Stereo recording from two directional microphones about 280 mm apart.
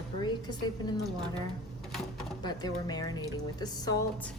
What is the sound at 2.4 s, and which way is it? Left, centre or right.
Speech, centre.